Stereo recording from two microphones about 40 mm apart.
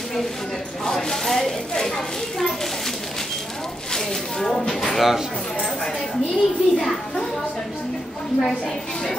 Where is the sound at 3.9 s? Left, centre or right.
Centre.